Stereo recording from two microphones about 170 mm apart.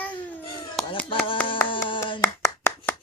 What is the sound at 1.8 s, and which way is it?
Clapping, 30° left (ahead or behind).